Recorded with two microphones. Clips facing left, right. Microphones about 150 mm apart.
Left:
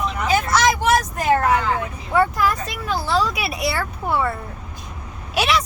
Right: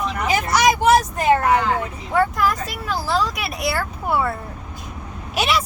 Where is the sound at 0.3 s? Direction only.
15° right (ahead or behind).